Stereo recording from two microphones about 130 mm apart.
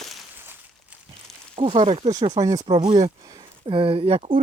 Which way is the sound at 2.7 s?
45° right (ahead or behind).